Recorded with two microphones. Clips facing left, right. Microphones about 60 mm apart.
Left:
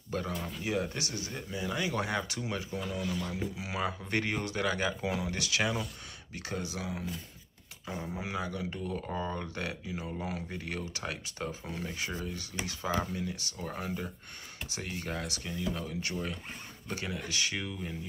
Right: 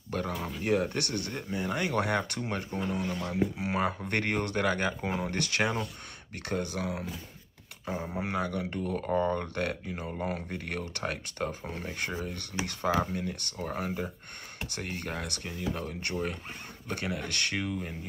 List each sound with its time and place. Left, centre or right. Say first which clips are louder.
0.3 s speech: right 2 dB; centre
0.6 s speech: right 6 dB; right
8.1 s speech: right 4 dB; right
14.7 s speech: right 1 dB; right